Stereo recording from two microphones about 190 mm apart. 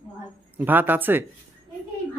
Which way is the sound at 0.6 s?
10° right (ahead or behind).